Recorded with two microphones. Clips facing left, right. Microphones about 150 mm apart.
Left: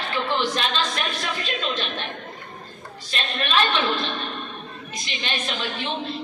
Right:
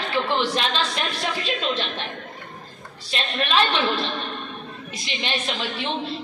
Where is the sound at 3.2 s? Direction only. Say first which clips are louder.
Right 2 dB; 25° right (ahead or behind).